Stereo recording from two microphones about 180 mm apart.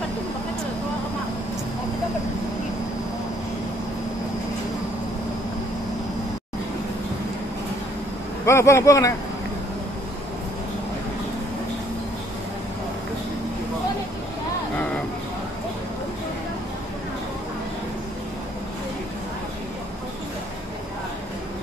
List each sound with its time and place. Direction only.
8.5 s speech: 15° left (ahead or behind)